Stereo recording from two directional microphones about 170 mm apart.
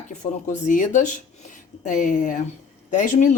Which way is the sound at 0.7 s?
50° left (ahead or behind).